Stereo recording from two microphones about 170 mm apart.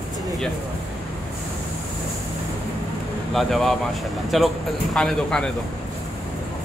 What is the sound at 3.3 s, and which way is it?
Speech, centre (ahead or behind).